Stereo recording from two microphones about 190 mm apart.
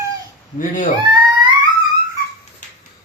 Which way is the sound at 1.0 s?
25° right (ahead or behind).